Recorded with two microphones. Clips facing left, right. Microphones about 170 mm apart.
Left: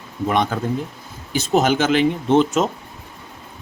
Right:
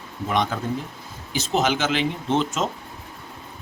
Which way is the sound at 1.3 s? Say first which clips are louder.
Left 5 dB; 50° left (ahead or behind).